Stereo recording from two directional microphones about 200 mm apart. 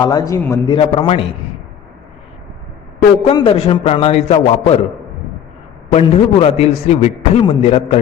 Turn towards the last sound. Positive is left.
turn(degrees=25)  # may be behind; listen again after turning